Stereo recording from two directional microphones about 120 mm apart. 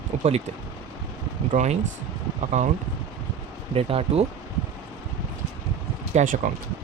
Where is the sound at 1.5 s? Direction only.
75° right (ahead or behind).